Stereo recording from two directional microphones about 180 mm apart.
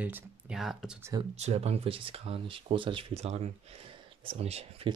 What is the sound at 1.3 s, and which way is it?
Speech, 35° right (ahead or behind).